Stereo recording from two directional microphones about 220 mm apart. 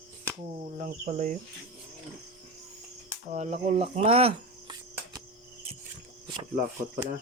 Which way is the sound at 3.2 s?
30° right (ahead or behind).